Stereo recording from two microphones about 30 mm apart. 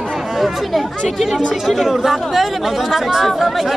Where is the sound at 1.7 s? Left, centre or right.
Centre.